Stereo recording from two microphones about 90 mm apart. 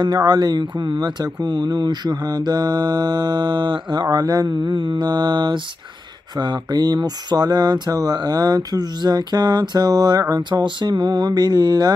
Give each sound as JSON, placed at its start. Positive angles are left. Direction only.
{"t": 0.0, "sound": "speech", "side_deg": -50}